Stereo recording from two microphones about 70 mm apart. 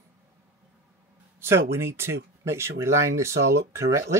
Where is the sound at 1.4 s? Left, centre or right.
Right.